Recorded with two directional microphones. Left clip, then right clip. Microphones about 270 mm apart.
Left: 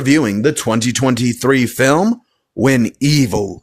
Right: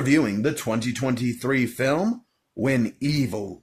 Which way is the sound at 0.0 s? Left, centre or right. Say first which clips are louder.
Left 8 dB; left.